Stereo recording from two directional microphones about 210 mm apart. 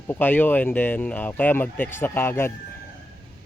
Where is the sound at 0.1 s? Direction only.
10° left (ahead or behind).